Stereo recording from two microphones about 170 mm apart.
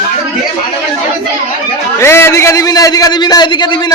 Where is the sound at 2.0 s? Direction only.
15° left (ahead or behind).